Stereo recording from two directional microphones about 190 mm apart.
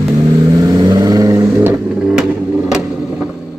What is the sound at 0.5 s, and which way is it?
Vehicle, 20° right (ahead or behind).